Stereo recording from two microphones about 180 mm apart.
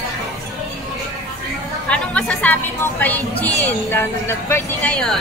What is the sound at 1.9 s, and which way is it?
A woman's voice, 5° left (ahead or behind).